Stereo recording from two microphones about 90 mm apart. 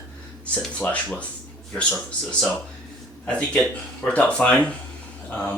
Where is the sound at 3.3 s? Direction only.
15° left (ahead or behind).